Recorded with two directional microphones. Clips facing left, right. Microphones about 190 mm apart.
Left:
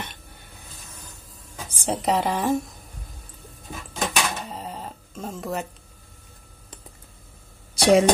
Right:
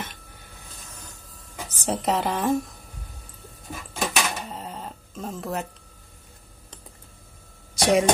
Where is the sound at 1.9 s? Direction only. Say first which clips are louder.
Left 1 dB; centre (ahead or behind).